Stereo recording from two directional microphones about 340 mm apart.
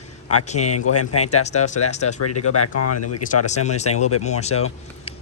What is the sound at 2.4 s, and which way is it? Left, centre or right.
Speech, left.